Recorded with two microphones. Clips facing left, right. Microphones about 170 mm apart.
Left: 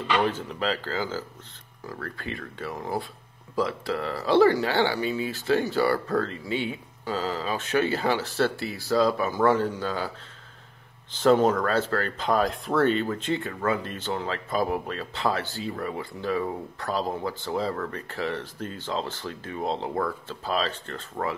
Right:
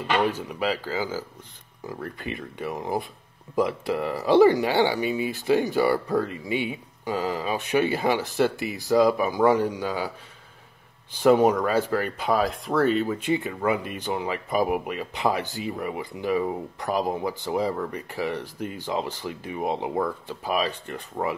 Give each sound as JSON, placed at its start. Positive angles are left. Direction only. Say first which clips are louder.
{"t": 0.2, "sound": "speech", "louder": "right 1 dB", "side_deg": -10}